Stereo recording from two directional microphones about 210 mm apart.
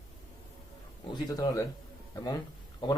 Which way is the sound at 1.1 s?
20° left (ahead or behind).